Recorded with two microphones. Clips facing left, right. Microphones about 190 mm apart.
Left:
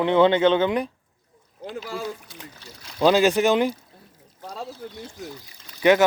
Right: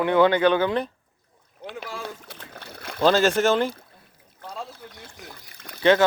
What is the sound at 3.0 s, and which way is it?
Speech, 15° left (ahead or behind).